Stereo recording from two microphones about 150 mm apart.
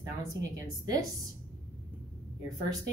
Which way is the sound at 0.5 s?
25° right (ahead or behind).